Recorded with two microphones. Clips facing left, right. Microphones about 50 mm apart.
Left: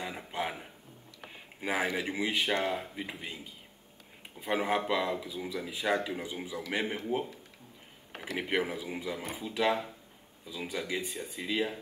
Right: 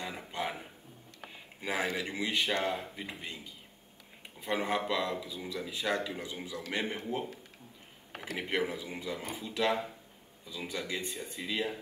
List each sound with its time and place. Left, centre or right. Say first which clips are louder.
0.0 s a sound: left 1 dB; centre
1.6 s speech: left 2 dB; centre
4.4 s a man's voice: left 2 dB; centre
8.3 s speech: left 1 dB; centre